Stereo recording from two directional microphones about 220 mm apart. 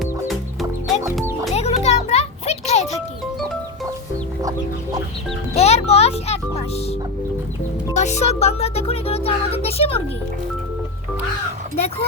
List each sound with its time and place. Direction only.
0.0 s chicken: centre (ahead or behind)
1.2 s music: 10° right (ahead or behind)
1.5 s music: 30° left (ahead or behind)
5.5 s music: 30° left (ahead or behind)
7.9 s music: 30° left (ahead or behind)